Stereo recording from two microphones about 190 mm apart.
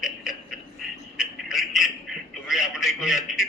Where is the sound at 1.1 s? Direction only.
Centre (ahead or behind).